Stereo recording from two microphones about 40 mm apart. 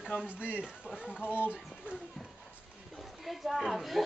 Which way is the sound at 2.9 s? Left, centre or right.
Centre.